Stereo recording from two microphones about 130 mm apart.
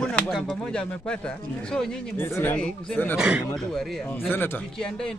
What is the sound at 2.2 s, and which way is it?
A man's voice, 15° left (ahead or behind).